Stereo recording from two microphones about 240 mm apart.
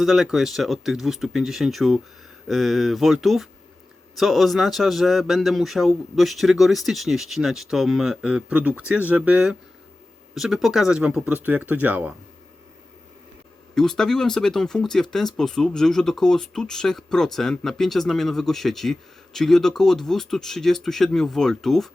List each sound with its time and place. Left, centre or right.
0.0 s speech: centre
13.7 s speech: centre